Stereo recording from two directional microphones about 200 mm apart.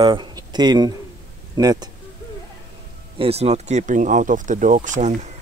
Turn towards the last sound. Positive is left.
turn(degrees=-35)  # may be behind; listen again after turning